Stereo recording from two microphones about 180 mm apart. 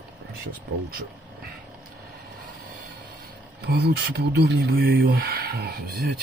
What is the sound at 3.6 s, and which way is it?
Speech, 65° right (ahead or behind).